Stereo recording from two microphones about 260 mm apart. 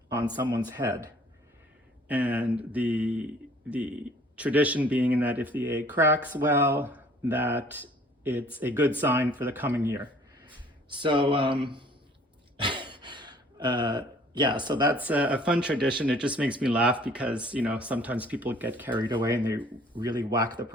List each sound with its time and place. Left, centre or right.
0.1 s speech: centre
12.5 s gasp: centre
14.9 s speech: centre
18.9 s speech: centre